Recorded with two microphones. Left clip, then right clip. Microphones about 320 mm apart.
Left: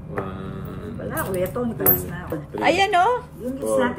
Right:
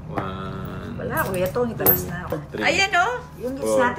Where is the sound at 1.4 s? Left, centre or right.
Right.